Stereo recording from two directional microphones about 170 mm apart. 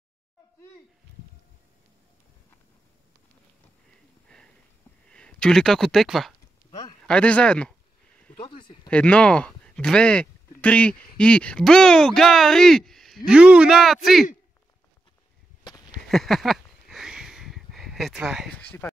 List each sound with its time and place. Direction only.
5.1 s speech: 5° left (ahead or behind)
8.4 s speech: 30° left (ahead or behind)
8.8 s speech: 5° left (ahead or behind)
16.1 s a sound: centre (ahead or behind)